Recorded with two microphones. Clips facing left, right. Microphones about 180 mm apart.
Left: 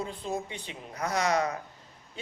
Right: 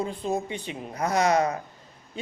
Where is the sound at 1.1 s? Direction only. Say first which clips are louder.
Right 5 dB; 50° right (ahead or behind).